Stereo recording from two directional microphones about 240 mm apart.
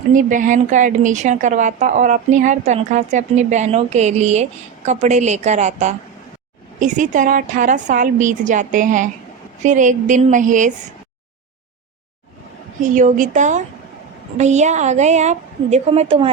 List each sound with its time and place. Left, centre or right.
0.1 s a woman's voice: right
12.8 s a woman's voice: right